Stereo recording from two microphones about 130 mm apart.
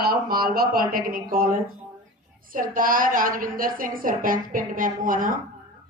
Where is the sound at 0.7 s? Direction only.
90° right.